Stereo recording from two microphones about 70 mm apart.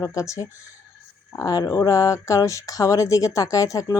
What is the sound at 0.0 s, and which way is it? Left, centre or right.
Speech, left.